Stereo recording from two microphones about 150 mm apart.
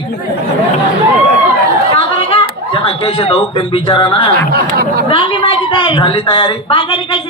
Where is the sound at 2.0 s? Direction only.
35° left (ahead or behind).